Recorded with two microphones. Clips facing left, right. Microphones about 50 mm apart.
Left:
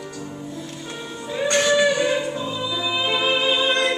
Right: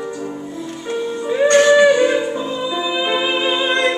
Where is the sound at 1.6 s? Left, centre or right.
Right.